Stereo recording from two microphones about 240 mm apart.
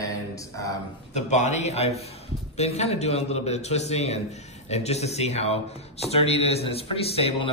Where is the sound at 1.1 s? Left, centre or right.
Left.